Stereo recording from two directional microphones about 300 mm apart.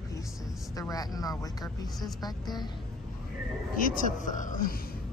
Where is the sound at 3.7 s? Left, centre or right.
Left.